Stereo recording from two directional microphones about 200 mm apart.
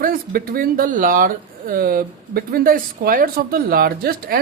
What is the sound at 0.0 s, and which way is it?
A woman's voice, 45° right (ahead or behind).